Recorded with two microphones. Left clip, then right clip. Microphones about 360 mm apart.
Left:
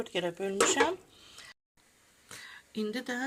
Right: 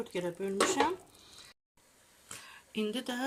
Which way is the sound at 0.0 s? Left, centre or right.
Centre.